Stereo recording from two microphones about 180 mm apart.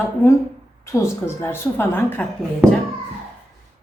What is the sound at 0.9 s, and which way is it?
A woman's voice, 15° left (ahead or behind).